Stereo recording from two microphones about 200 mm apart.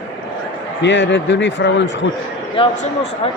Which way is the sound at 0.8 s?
65° left (ahead or behind).